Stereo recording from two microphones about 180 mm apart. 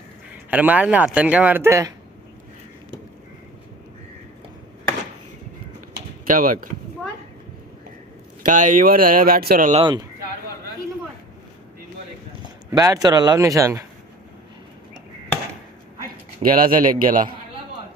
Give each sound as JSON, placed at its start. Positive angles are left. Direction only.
{"t": 0.5, "sound": "speech", "side_deg": -10}
{"t": 6.2, "sound": "speech", "side_deg": -50}
{"t": 8.4, "sound": "speech", "side_deg": -45}
{"t": 9.7, "sound": "speech", "side_deg": -25}
{"t": 12.7, "sound": "speech", "side_deg": -20}
{"t": 16.4, "sound": "speech", "side_deg": -50}